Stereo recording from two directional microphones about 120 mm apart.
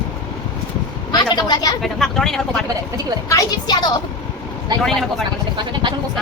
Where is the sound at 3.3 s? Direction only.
30° left (ahead or behind).